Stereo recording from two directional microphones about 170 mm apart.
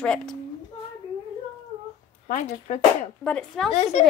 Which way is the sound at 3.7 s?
40° left (ahead or behind).